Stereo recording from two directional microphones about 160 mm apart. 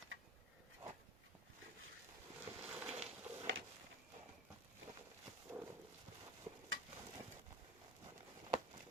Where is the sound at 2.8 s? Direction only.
40° right (ahead or behind).